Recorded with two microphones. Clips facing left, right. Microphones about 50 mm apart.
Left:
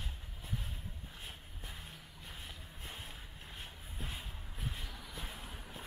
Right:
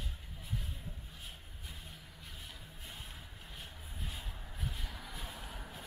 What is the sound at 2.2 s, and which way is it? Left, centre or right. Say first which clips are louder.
Music: left 2 dB; left.